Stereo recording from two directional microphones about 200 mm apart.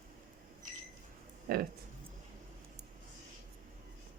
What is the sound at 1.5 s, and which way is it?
Speech, 50° right (ahead or behind).